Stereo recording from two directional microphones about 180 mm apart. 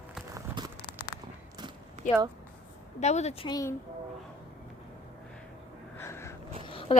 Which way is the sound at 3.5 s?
20° left (ahead or behind).